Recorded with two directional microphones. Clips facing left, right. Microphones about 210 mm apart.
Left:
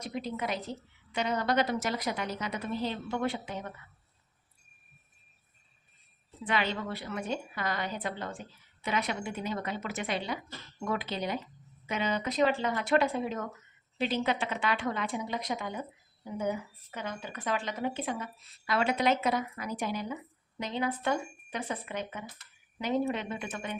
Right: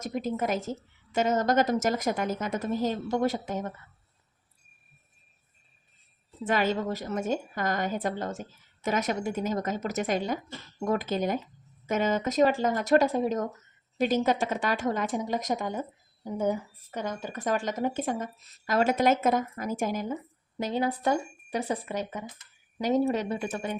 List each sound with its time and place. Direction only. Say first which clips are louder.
0.0 s speech: right 5 dB; 45° right (ahead or behind)
6.4 s speech: right 5 dB; 45° right (ahead or behind)